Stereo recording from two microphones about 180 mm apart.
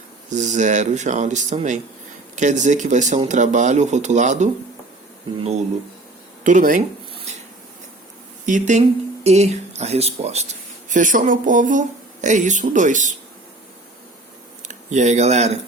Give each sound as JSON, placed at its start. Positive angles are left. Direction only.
{"t": 0.3, "sound": "speech", "side_deg": -40}
{"t": 6.4, "sound": "speech", "side_deg": -45}
{"t": 8.4, "sound": "speech", "side_deg": -45}
{"t": 14.7, "sound": "speech", "side_deg": -40}